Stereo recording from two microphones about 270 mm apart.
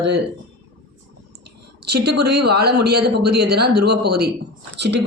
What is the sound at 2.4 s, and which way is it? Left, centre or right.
Speech, right.